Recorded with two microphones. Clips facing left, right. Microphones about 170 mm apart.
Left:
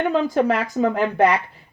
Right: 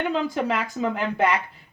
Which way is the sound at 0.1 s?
45° left (ahead or behind).